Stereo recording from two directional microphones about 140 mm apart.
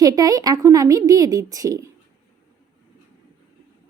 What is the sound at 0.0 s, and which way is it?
A woman's voice, 25° right (ahead or behind).